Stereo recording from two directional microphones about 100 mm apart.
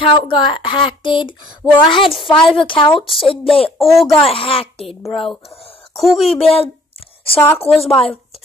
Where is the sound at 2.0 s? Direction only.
Centre (ahead or behind).